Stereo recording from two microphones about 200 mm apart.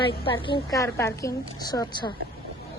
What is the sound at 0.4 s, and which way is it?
A woman's voice, 20° left (ahead or behind).